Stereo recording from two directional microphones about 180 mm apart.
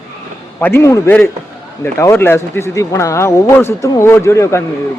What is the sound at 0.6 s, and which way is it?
Speech, 15° left (ahead or behind).